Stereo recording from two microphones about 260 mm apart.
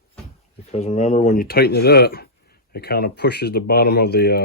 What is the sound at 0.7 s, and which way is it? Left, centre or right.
Speech, left.